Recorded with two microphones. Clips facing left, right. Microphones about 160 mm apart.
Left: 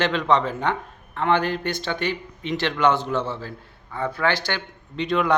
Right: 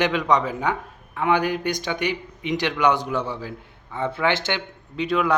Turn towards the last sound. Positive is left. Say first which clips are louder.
# even
turn(degrees=-5)  # may be behind; listen again after turning